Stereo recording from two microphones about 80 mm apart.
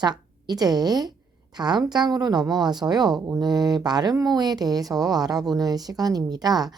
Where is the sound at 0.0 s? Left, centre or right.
Right.